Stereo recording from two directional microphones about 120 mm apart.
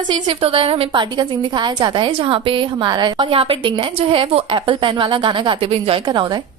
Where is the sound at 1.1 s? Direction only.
40° right (ahead or behind).